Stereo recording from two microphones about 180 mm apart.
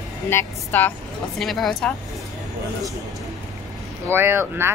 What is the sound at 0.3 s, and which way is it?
Speech, 10° left (ahead or behind).